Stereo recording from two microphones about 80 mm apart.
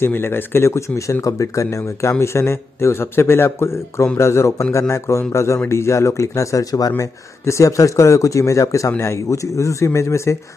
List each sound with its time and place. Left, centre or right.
0.0 s speech: left